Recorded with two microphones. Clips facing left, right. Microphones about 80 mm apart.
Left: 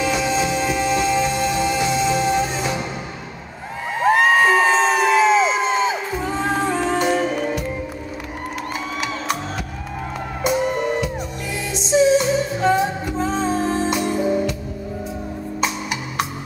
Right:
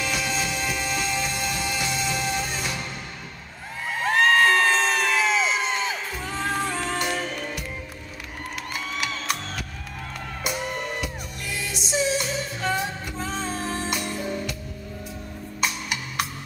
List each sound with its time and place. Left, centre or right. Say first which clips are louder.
0.0 s music: left 8 dB; centre
3.9 s crowd: left 5 dB; centre
6.1 s music: left 8 dB; centre
6.4 s music: left 5 dB; centre
10.6 s music: left 9 dB; centre
11.9 s music: left 11 dB; centre
13.1 s music: left 9 dB; left
13.8 s music: left 9 dB; centre
15.6 s music: left 3 dB; centre